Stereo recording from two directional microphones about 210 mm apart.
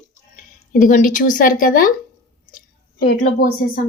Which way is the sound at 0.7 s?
40° left (ahead or behind).